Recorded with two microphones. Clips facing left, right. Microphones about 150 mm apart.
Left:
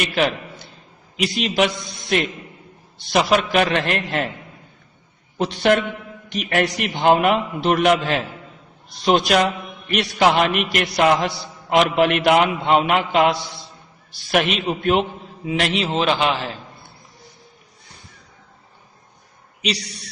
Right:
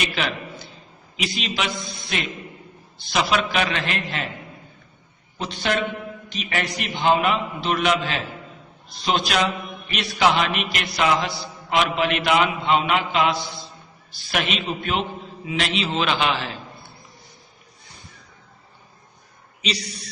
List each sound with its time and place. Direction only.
0.0 s a man's voice: 50° left (ahead or behind)
5.4 s a man's voice: 60° left (ahead or behind)
16.0 s a man's voice: 35° left (ahead or behind)